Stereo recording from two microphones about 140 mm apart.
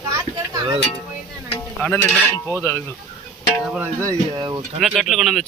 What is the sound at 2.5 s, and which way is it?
Speech, 15° left (ahead or behind).